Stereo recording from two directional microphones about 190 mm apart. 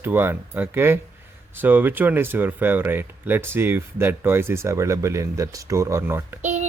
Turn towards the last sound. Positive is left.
turn(degrees=-40)  # may be behind; listen again after turning